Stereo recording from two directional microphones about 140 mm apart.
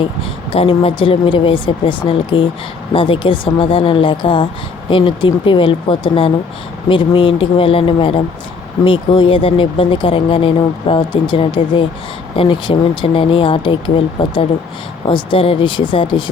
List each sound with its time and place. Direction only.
0.5 s speech: 40° left (ahead or behind)